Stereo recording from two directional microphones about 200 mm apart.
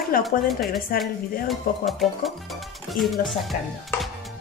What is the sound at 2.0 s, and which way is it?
Speech, centre (ahead or behind).